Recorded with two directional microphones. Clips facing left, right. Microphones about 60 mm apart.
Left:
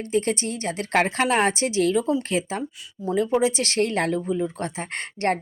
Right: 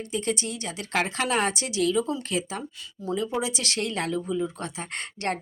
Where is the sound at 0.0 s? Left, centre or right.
Left.